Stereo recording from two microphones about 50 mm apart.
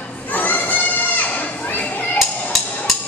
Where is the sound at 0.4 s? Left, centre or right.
Left.